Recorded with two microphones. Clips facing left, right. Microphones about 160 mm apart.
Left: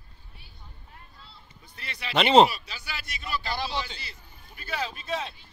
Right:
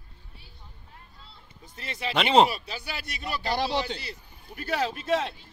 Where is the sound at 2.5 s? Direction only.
50° right (ahead or behind).